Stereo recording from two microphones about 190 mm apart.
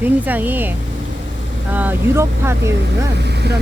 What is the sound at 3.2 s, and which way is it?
Speech, 60° right (ahead or behind).